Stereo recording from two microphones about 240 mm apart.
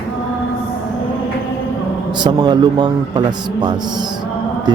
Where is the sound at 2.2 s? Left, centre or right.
Centre.